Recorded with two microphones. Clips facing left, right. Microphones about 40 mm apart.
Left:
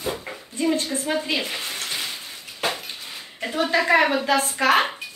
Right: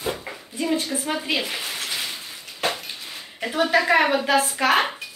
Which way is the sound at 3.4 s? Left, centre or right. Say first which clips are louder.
Right 2 dB; centre.